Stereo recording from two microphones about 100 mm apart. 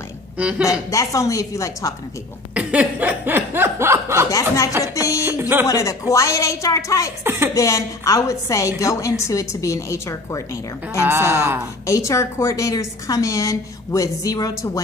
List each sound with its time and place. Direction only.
0.4 s speech: 10° right (ahead or behind)
0.7 s a woman's voice: 35° left (ahead or behind)
2.5 s chuckle: 15° right (ahead or behind)
4.3 s a woman's voice: 35° left (ahead or behind)
5.2 s a sound: 20° right (ahead or behind)
5.7 s a woman's voice: 35° left (ahead or behind)
7.2 s a woman's voice: 25° right (ahead or behind)
7.5 s a woman's voice: 35° left (ahead or behind)
11.0 s a woman's voice: 25° right (ahead or behind)
11.8 s a woman's voice: 30° left (ahead or behind)